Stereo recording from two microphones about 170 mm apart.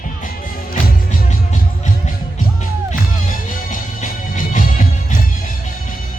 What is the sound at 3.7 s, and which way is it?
Music, 50° left (ahead or behind).